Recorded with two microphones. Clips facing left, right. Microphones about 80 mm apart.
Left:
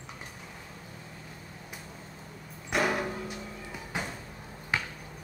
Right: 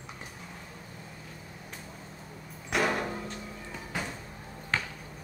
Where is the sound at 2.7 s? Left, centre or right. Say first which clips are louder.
Even; centre.